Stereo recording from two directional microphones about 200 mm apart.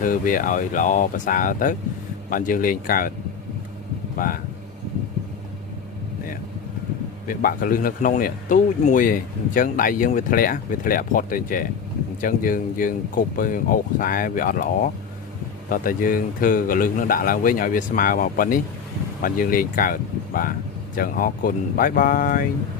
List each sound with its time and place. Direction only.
0.0 s speech: 45° left (ahead or behind)
4.2 s speech: 45° left (ahead or behind)
7.3 s speech: 45° left (ahead or behind)